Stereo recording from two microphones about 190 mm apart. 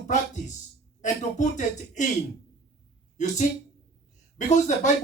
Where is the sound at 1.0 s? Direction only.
40° left (ahead or behind).